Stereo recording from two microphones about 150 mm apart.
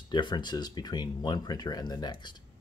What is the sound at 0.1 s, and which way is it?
Speech, 30° left (ahead or behind).